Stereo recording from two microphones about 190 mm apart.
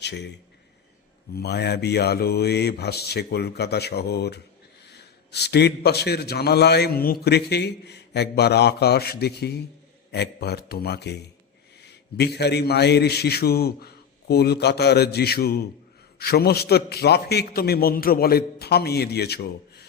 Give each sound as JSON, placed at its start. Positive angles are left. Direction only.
{"t": 0.0, "sound": "a man's voice", "side_deg": 65}
{"t": 1.4, "sound": "a man's voice", "side_deg": 60}